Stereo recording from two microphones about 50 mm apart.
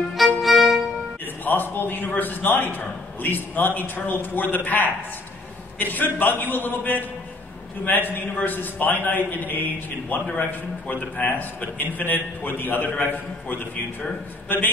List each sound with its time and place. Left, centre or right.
0.1 s violin: centre
1.2 s a man's voice: left